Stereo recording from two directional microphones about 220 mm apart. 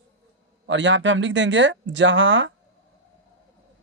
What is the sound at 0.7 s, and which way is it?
Speech, 55° right (ahead or behind).